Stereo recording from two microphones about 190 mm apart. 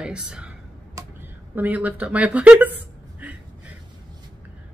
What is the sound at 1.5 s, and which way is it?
Speech, 10° right (ahead or behind).